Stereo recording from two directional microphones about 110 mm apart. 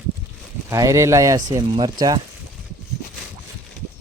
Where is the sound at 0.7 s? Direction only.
30° right (ahead or behind).